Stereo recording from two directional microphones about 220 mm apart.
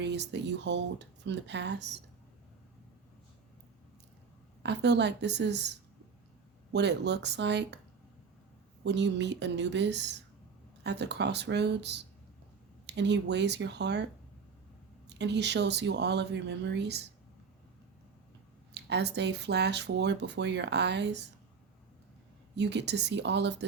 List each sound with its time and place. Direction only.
0.0 s speech: 50° right (ahead or behind)
4.6 s speech: 50° right (ahead or behind)
6.7 s speech: 50° right (ahead or behind)
8.8 s speech: 50° right (ahead or behind)
18.7 s speech: 50° right (ahead or behind)
22.5 s speech: 50° right (ahead or behind)